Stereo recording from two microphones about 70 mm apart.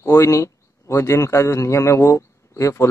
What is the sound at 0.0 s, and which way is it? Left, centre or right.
A man's voice, left.